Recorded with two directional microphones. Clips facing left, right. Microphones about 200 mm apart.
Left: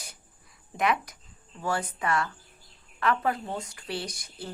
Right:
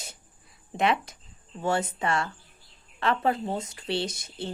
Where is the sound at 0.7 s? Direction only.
25° right (ahead or behind).